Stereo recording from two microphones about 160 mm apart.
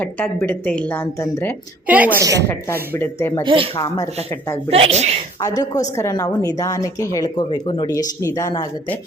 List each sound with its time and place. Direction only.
0.0 s speech: 10° left (ahead or behind)
2.1 s a woman's voice: 20° right (ahead or behind)
3.0 s speech: 15° left (ahead or behind)
3.4 s speech: 35° right (ahead or behind)
3.8 s speech: 20° left (ahead or behind)
4.7 s speech: 40° right (ahead or behind)
5.4 s speech: 20° left (ahead or behind)